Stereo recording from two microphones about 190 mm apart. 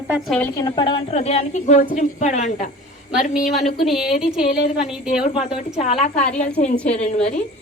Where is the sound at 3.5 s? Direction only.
Centre (ahead or behind).